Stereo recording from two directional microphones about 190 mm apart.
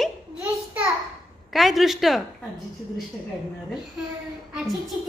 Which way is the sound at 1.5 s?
Centre (ahead or behind).